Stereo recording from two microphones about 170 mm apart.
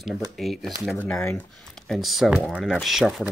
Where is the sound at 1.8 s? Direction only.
Centre (ahead or behind).